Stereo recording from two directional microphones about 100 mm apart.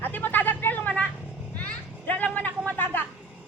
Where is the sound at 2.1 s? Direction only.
15° left (ahead or behind).